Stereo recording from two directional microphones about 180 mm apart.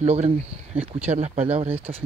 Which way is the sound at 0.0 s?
35° right (ahead or behind).